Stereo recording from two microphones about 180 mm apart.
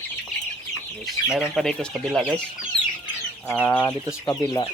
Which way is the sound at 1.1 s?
Centre (ahead or behind).